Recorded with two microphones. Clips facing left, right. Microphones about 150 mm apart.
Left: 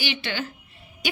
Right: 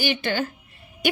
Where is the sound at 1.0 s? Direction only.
55° right (ahead or behind).